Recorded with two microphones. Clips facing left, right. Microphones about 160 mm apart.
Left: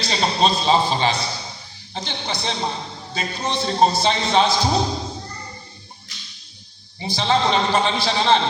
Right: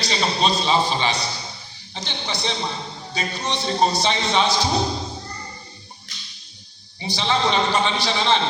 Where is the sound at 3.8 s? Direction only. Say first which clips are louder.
Left 3 dB; 40° left (ahead or behind).